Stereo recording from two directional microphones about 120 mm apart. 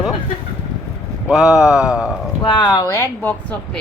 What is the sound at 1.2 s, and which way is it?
Speech, 5° right (ahead or behind).